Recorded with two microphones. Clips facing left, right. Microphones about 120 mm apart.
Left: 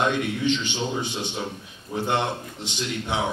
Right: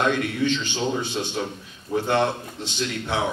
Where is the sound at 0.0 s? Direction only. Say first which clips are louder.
Right 1 dB; 15° left (ahead or behind).